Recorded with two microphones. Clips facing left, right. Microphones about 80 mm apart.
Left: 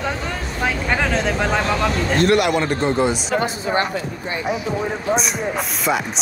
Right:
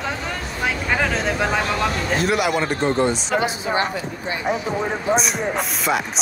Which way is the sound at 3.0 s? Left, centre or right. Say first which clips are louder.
Left 1 dB; centre.